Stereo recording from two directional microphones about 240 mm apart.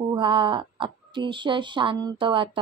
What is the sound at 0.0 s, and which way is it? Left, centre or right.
Speech, centre.